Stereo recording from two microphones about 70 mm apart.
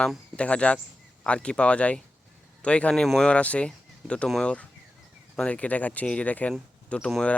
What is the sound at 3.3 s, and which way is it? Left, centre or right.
Speech, centre.